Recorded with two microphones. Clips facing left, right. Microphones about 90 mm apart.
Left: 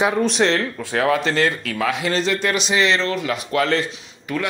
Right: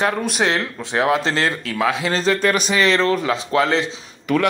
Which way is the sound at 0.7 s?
20° right (ahead or behind).